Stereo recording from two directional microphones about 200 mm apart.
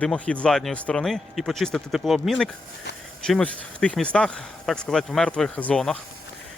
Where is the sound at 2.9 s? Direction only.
60° left (ahead or behind).